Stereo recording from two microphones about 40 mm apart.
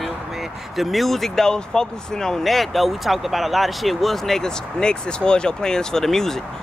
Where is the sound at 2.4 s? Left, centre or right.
Centre.